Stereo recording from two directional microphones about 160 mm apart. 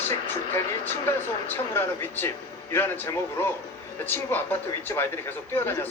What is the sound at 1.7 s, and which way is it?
Speech, 15° left (ahead or behind).